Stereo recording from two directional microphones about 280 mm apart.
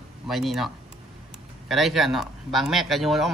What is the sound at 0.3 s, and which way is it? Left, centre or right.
Speech, centre.